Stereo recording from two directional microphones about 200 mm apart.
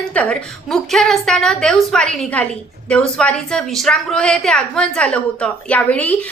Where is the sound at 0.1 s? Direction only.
5° left (ahead or behind).